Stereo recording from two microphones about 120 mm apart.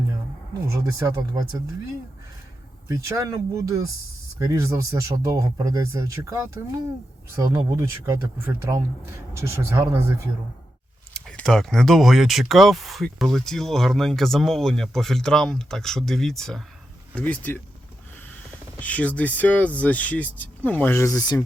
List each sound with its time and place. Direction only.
0.7 s speech: 25° right (ahead or behind)
2.9 s speech: 25° right (ahead or behind)
11.1 s speech: 5° left (ahead or behind)
17.2 s speech: 15° left (ahead or behind)
18.8 s speech: 10° left (ahead or behind); by 21.4 s 30° left (ahead or behind)